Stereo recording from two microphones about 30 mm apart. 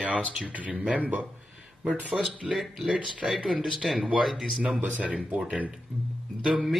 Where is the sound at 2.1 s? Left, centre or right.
Centre.